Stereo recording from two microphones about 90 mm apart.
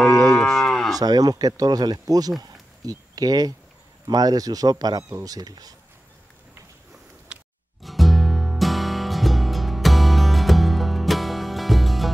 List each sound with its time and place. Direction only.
0.4 s moo: centre (ahead or behind)
0.9 s speech: 45° right (ahead or behind)
7.8 s music: centre (ahead or behind)